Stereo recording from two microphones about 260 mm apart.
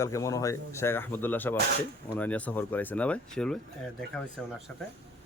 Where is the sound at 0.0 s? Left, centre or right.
Centre.